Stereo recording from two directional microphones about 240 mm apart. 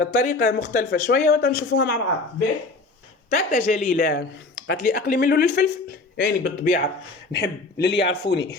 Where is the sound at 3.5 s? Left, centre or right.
Left.